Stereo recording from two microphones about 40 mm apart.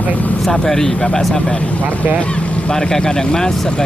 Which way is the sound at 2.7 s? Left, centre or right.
Centre.